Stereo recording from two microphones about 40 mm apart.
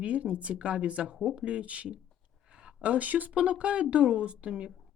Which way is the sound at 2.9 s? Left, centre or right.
Right.